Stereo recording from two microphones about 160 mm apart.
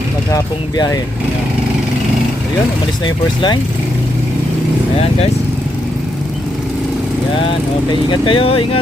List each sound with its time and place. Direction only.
0.3 s speech: 20° left (ahead or behind)
3.0 s speech: 30° left (ahead or behind)
8.1 s speech: 30° left (ahead or behind)